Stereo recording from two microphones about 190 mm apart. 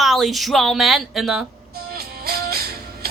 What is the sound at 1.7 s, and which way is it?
Music, 55° right (ahead or behind).